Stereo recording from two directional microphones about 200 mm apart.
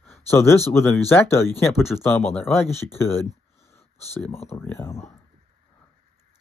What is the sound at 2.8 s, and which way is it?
Speech, 10° left (ahead or behind).